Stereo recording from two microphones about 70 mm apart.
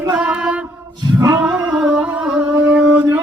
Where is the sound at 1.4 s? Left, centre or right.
Centre.